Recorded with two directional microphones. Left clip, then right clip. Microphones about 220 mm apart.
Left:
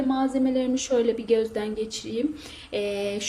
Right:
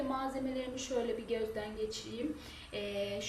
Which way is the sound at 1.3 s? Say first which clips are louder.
Left 13 dB; 50° left (ahead or behind).